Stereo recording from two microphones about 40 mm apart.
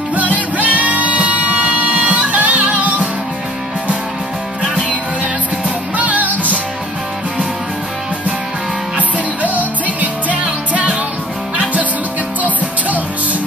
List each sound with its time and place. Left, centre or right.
0.1 s music: right
5.9 s music: right
8.9 s music: right